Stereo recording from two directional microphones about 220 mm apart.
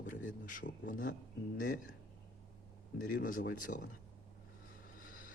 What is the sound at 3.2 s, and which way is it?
Speech, 40° left (ahead or behind).